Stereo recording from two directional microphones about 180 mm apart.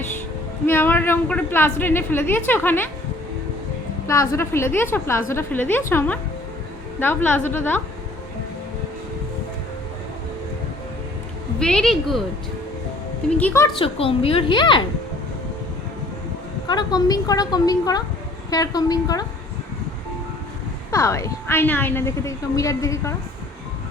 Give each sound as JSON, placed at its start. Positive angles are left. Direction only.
{"t": 0.7, "sound": "a woman's voice", "side_deg": 10}
{"t": 4.0, "sound": "a woman's voice", "side_deg": 15}
{"t": 11.6, "sound": "a woman's voice", "side_deg": 5}
{"t": 13.3, "sound": "a woman's voice", "side_deg": 10}
{"t": 13.7, "sound": "a woman's voice", "side_deg": 30}
{"t": 16.6, "sound": "a woman's voice", "side_deg": 25}
{"t": 20.9, "sound": "a woman's voice", "side_deg": 15}